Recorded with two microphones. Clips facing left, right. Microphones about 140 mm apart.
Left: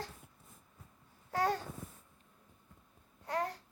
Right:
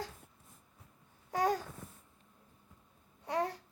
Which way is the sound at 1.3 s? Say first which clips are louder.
Right 1 dB; 15° right (ahead or behind).